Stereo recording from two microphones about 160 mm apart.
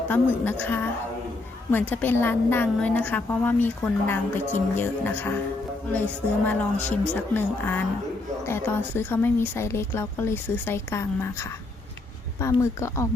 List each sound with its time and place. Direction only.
0.1 s speech: 10° left (ahead or behind)
6.4 s speech: 10° left (ahead or behind)